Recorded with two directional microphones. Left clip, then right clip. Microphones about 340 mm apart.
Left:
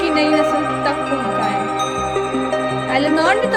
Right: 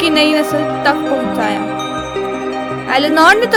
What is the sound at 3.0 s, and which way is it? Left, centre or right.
Music, right.